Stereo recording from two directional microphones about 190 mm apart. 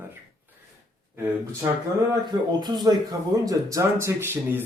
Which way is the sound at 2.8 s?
20° right (ahead or behind).